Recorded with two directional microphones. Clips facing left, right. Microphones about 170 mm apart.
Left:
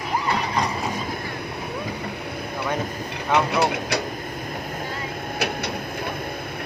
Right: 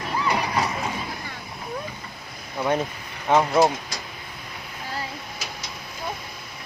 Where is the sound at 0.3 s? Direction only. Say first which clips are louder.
Right 1 dB; 5° right (ahead or behind).